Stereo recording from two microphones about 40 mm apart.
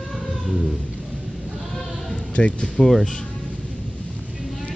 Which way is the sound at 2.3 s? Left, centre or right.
Left.